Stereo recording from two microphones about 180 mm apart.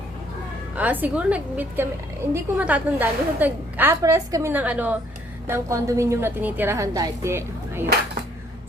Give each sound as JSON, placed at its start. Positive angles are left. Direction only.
{"t": 0.8, "sound": "a woman's voice", "side_deg": -10}